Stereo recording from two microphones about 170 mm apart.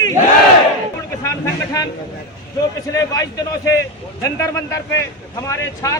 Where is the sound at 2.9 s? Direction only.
20° left (ahead or behind).